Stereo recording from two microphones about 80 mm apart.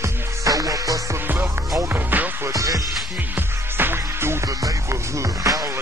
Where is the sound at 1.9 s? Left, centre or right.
Right.